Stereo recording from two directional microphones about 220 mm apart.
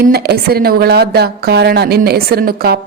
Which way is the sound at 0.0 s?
45° right (ahead or behind).